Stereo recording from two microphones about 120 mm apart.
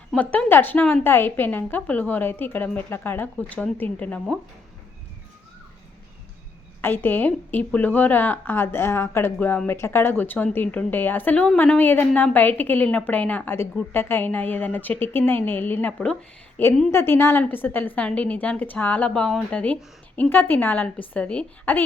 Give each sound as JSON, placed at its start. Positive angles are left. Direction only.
{"t": 0.2, "sound": "a woman's voice", "side_deg": 15}
{"t": 6.8, "sound": "a woman's voice", "side_deg": 15}